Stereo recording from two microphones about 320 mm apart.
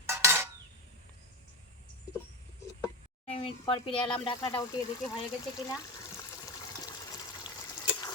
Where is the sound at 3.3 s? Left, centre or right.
Centre.